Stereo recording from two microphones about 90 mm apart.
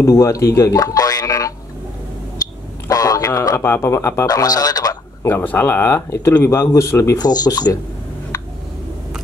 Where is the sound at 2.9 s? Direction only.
40° left (ahead or behind).